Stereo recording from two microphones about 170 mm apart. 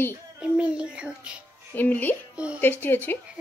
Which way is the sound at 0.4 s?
5° right (ahead or behind).